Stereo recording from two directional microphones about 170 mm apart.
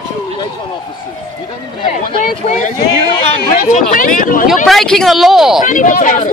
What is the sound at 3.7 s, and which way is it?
Speech, 55° left (ahead or behind).